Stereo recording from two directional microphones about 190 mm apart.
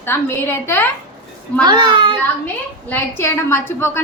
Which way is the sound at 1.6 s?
25° right (ahead or behind).